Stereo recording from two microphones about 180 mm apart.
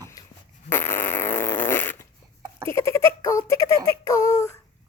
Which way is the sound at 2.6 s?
15° left (ahead or behind).